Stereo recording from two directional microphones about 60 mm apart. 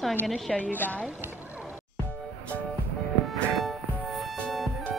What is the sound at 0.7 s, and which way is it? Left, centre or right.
Speech, left.